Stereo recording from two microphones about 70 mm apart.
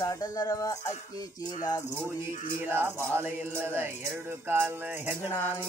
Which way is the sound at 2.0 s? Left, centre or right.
Right.